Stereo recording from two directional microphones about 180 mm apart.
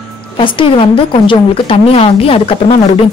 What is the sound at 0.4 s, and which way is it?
A woman's voice, 30° left (ahead or behind).